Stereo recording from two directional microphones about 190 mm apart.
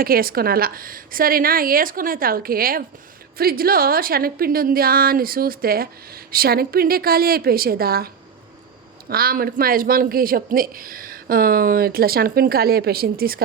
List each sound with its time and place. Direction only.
0.0 s a woman's voice: 50° right (ahead or behind)